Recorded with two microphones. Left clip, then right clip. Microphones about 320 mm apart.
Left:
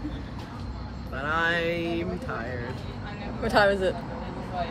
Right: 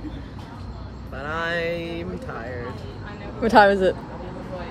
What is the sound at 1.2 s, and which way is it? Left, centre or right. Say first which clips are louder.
Speech: even; centre.